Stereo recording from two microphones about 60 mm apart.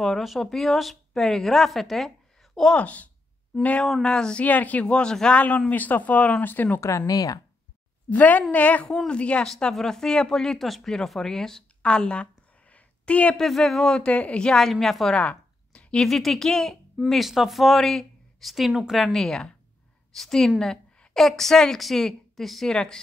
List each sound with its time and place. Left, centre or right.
0.0 s a woman's voice: centre
2.7 s speech: left
3.8 s a woman's voice: centre
4.4 s speech: left
6.8 s speech: left
7.1 s speech: left
8.1 s speech: left
8.8 s a woman's voice: centre
9.5 s speech: centre
13.4 s a woman's voice: centre
15.1 s a sound: centre
16.0 s a woman's voice: centre
17.1 s a woman's voice: centre
19.1 s a woman's voice: centre